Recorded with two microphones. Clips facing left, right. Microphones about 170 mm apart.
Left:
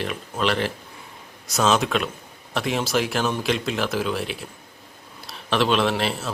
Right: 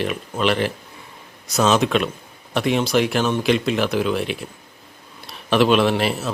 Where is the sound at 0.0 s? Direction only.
5° right (ahead or behind).